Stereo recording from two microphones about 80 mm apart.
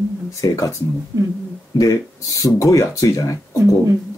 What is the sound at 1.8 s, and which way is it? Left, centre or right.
Speech, left.